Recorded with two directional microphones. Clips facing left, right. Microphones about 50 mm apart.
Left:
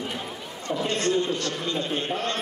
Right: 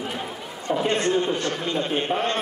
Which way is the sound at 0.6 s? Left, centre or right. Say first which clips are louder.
Right 3 dB; right.